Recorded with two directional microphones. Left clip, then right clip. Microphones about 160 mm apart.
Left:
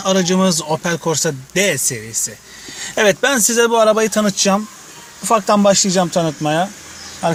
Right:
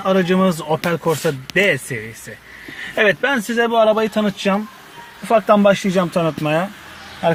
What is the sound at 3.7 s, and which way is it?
Speech, 50° left (ahead or behind).